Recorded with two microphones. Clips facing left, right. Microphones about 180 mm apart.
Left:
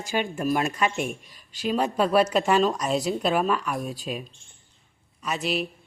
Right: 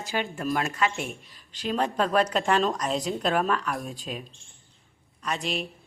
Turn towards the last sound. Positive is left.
turn(degrees=5)  # may be behind; listen again after turning